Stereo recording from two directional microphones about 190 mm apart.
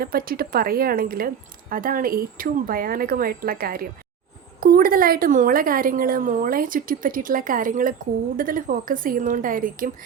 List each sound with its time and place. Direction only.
0.0 s a woman's voice: 50° right (ahead or behind)